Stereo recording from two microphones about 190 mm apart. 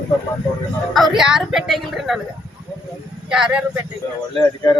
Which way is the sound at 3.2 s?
5° right (ahead or behind).